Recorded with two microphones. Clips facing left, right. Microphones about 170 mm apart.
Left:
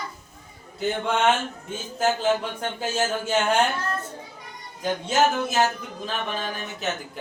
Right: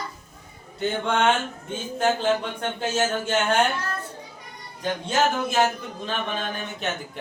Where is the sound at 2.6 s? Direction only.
5° left (ahead or behind).